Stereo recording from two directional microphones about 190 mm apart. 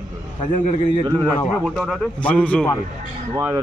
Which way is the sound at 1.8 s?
5° left (ahead or behind).